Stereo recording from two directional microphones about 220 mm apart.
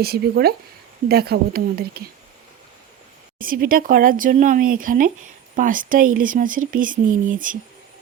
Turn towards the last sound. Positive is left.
turn(degrees=-35)  # may be behind; listen again after turning